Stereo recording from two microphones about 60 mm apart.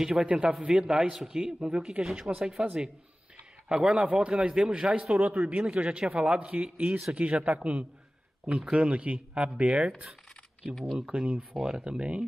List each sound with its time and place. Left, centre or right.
0.0 s a man's voice: centre
10.7 s speech: centre
11.0 s speech: centre